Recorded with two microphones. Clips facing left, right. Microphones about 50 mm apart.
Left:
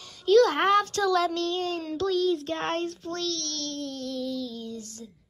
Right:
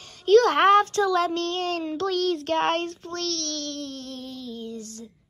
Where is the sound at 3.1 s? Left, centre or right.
Right.